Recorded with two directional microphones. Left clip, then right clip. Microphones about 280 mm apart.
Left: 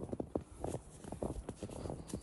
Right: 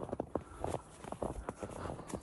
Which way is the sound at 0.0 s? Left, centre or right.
Right.